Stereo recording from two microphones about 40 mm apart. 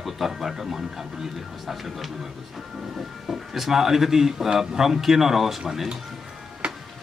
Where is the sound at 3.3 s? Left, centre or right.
Centre.